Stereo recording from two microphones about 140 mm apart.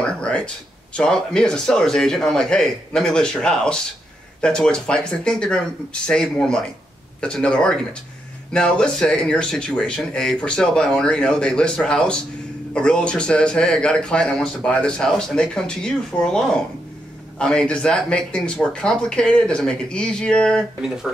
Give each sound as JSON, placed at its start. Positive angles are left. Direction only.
{"t": 0.9, "sound": "a man's voice", "side_deg": 5}